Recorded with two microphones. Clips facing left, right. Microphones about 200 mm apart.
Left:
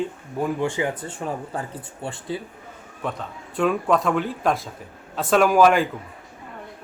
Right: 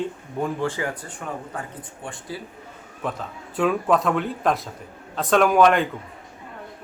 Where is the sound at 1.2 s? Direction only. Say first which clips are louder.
Left 3 dB; 25° left (ahead or behind).